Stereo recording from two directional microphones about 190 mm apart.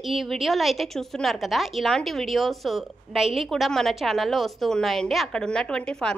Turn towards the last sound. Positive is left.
turn(degrees=5)  # may be behind; listen again after turning